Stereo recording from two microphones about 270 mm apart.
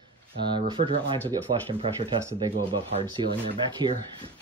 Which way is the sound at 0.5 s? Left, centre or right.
Centre.